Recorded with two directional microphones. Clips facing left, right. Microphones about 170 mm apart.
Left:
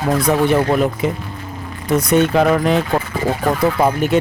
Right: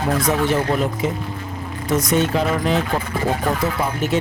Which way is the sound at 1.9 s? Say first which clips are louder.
Left 4 dB; 60° left (ahead or behind).